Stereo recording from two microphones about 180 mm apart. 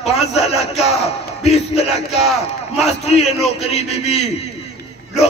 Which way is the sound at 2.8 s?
35° left (ahead or behind).